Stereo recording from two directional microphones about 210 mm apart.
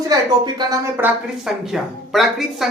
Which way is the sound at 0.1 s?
15° right (ahead or behind).